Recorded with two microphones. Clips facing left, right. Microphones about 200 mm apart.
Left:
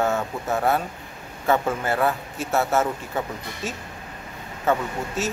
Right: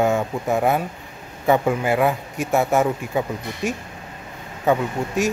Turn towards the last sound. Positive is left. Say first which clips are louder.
# right 5 dB
turn(degrees=-15)  # may be behind; listen again after turning